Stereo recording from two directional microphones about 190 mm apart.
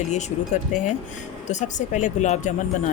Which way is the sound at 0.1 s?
40° left (ahead or behind).